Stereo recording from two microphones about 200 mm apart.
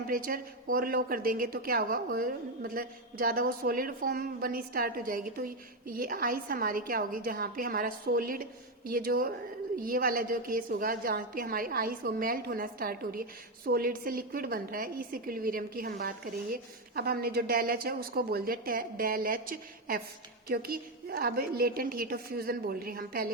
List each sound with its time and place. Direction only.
0.1 s a woman's voice: 45° right (ahead or behind)